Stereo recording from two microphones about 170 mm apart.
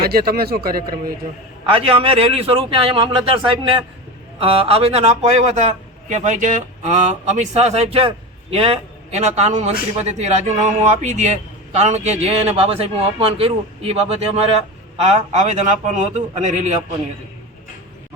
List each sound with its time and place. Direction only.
0.0 s a man's voice: 65° right (ahead or behind)
1.7 s a man's voice: 35° right (ahead or behind)